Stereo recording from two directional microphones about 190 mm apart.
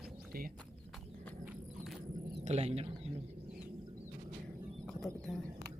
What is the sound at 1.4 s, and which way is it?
Horse, 10° right (ahead or behind).